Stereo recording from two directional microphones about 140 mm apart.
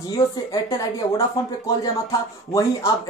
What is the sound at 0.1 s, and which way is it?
Speech, 25° left (ahead or behind).